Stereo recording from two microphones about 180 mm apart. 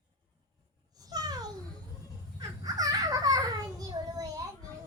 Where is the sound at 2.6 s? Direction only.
20° right (ahead or behind).